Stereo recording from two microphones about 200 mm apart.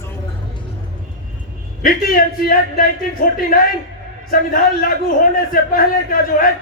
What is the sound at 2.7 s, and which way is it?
A man's voice, 45° left (ahead or behind).